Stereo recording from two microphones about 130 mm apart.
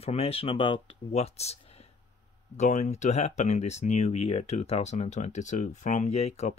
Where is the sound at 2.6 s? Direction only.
65° left (ahead or behind).